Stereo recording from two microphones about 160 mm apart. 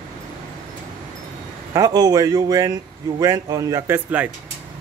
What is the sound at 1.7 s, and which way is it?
A man's voice, 25° right (ahead or behind).